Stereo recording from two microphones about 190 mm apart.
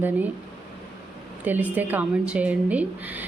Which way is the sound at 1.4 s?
10° right (ahead or behind).